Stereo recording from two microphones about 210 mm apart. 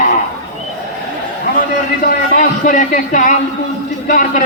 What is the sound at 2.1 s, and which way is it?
Speech, 40° left (ahead or behind).